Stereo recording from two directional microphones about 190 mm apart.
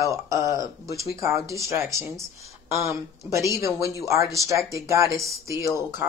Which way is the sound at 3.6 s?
15° right (ahead or behind).